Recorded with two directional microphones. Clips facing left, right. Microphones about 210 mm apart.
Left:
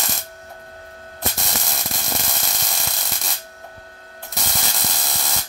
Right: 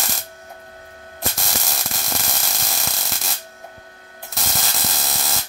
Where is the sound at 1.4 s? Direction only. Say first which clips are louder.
Even; centre (ahead or behind).